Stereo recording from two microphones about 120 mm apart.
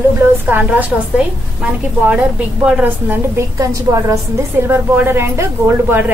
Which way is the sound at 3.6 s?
25° right (ahead or behind).